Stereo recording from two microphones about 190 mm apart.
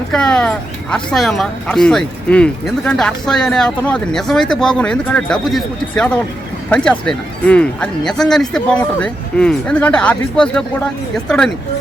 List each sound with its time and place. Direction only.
0.1 s speech: 5° left (ahead or behind)